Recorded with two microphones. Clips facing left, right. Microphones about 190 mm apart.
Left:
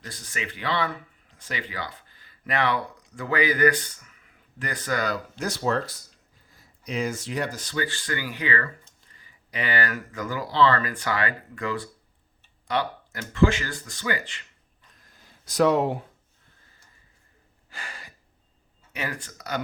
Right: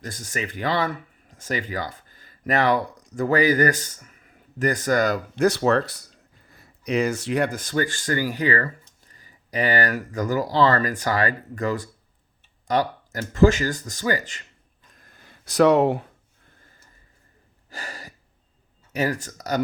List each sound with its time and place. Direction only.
0.0 s speech: 45° right (ahead or behind)
5.5 s speech: 70° right (ahead or behind); by 14.4 s 40° right (ahead or behind)
14.8 s a sound: 50° right (ahead or behind); by 16.0 s 70° right (ahead or behind)
17.7 s gasp: 40° right (ahead or behind)
18.9 s speech: 40° right (ahead or behind)